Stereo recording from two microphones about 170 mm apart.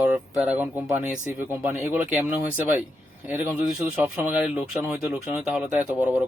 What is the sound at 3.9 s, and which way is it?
Speech, centre (ahead or behind).